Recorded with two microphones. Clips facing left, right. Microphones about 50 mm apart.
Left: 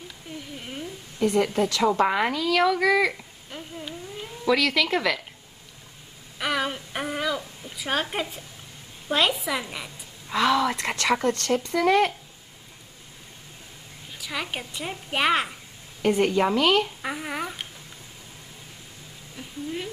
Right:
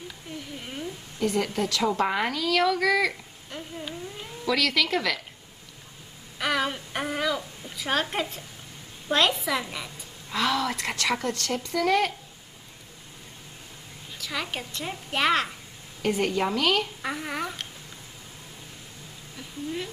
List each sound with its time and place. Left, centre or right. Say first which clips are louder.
0.6 s a sound: even; centre
1.4 s speech: left 4 dB; centre
4.5 s a woman's voice: left 3 dB; centre
6.3 s a woman's voice: even; centre
14.1 s a woman's voice: left 1 dB; centre
19.3 s a woman's voice: even; centre